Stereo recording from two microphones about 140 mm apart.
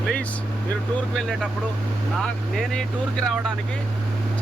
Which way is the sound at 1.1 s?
Centre (ahead or behind).